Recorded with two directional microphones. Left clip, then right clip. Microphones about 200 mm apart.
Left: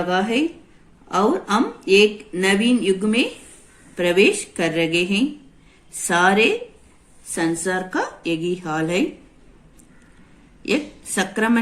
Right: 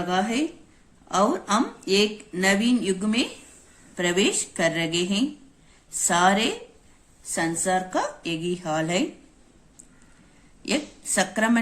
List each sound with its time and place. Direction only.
0.0 s speech: 50° right (ahead or behind)
10.6 s a woman's voice: 45° right (ahead or behind)